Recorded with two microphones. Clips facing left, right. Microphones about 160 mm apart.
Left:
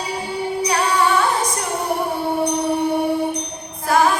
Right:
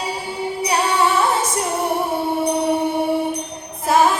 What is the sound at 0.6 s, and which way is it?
Music, 25° right (ahead or behind).